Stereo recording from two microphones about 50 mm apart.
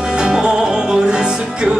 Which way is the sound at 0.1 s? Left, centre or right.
Centre.